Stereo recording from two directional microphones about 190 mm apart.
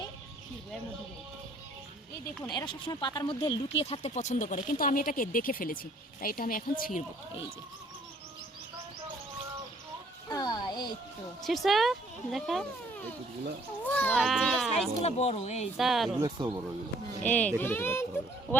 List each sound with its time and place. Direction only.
2.4 s speech: 20° left (ahead or behind); by 7.0 s 50° left (ahead or behind)
10.2 s speech: 20° left (ahead or behind)
11.4 s speech: centre (ahead or behind)
13.8 s a sound: 10° left (ahead or behind)
14.2 s speech: centre (ahead or behind)
15.0 s speech: 35° left (ahead or behind)
15.8 s speech: centre (ahead or behind)
16.2 s speech: 20° right (ahead or behind)
17.2 s speech: 5° left (ahead or behind)